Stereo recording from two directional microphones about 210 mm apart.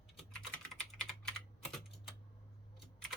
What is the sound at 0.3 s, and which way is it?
Typing, 5° left (ahead or behind).